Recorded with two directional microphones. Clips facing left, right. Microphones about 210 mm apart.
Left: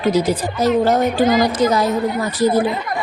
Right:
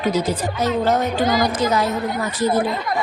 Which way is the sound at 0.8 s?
35° left (ahead or behind).